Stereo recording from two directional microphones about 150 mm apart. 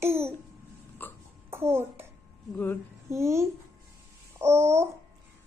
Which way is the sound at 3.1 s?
20° right (ahead or behind).